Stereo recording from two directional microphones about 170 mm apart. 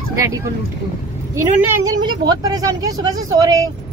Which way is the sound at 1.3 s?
20° right (ahead or behind).